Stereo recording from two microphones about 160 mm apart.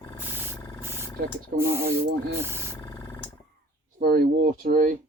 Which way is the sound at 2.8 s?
15° left (ahead or behind).